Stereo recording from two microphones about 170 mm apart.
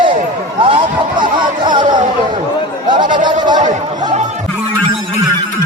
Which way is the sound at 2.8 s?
25° right (ahead or behind).